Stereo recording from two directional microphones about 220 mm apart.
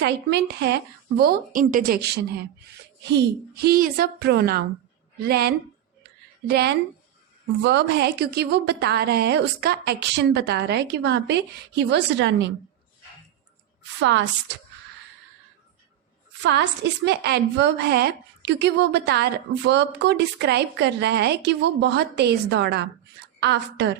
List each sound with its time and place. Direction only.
0.0 s a woman's voice: 50° right (ahead or behind)
3.5 s a woman's voice: 45° right (ahead or behind)
14.0 s speech: 55° right (ahead or behind)
16.4 s a woman's voice: 50° right (ahead or behind)